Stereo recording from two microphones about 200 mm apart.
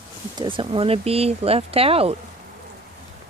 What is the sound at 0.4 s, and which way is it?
Speech, 25° right (ahead or behind).